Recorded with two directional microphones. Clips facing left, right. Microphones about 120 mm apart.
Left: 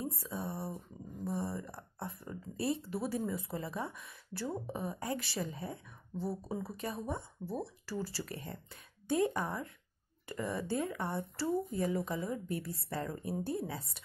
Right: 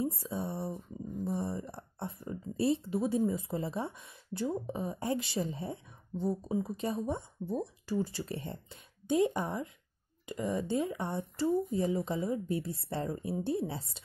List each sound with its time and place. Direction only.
0.1 s speech: 25° right (ahead or behind)
6.2 s speech: 5° left (ahead or behind)
6.6 s speech: 25° right (ahead or behind)